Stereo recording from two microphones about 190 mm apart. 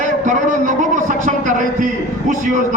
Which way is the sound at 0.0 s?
40° right (ahead or behind).